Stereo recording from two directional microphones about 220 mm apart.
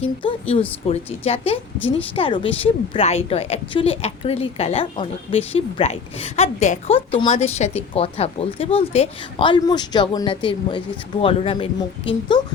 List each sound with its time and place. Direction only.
0.0 s a woman's voice: 25° left (ahead or behind)